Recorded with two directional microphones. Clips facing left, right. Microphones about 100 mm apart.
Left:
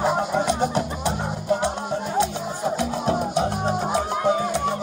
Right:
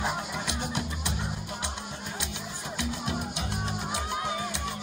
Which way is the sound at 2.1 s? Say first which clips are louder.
Left 14 dB; 40° left (ahead or behind).